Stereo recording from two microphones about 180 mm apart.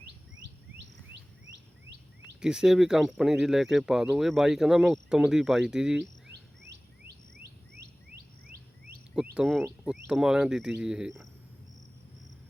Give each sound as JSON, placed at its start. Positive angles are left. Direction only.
{"t": 2.4, "sound": "speech", "side_deg": -5}
{"t": 7.8, "sound": "bird", "side_deg": -60}
{"t": 9.3, "sound": "speech", "side_deg": -5}